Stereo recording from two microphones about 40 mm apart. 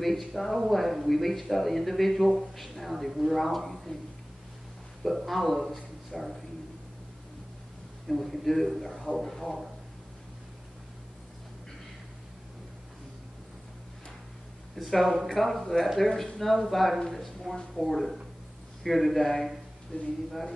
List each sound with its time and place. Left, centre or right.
0.0 s speech: centre
5.0 s speech: centre
8.1 s speech: centre
14.8 s speech: centre
19.9 s speech: left
20.2 s speech: centre